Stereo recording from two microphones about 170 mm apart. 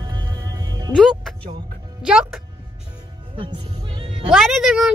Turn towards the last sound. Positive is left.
turn(degrees=0)  # may be behind; listen again after turning